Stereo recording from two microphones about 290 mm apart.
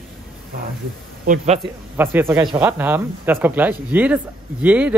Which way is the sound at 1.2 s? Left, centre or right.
Right.